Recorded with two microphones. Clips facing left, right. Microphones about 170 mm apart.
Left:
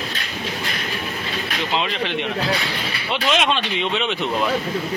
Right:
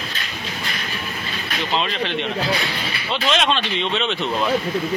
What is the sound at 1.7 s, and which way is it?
Speech, 15° left (ahead or behind).